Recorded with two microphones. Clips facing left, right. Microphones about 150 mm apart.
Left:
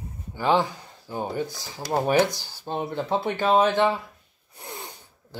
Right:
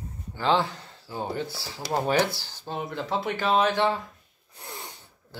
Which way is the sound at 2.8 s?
25° left (ahead or behind).